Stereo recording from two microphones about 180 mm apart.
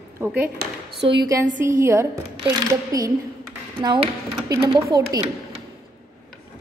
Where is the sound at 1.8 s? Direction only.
15° right (ahead or behind).